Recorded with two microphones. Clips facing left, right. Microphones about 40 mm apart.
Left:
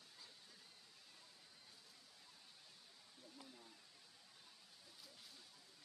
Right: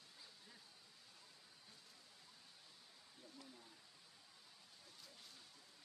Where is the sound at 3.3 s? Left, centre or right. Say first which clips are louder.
Even; centre.